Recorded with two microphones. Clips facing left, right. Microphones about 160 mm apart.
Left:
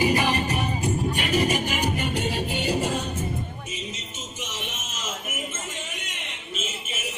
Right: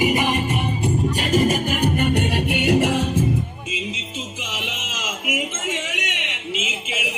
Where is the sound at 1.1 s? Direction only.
40° right (ahead or behind); by 3.0 s 80° right.